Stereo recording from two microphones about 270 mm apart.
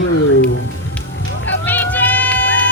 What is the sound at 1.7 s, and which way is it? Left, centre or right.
Music, centre.